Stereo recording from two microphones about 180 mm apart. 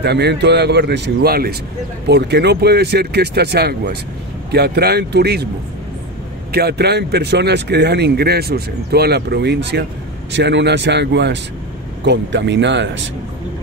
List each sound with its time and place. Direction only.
0.0 s speech: 65° right (ahead or behind)
6.5 s speech: 65° right (ahead or behind); by 12.9 s 80° right